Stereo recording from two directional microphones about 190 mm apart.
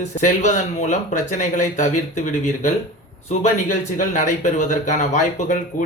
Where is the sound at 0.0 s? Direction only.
40° left (ahead or behind).